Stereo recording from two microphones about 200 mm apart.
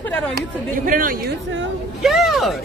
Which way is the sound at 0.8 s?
45° right (ahead or behind).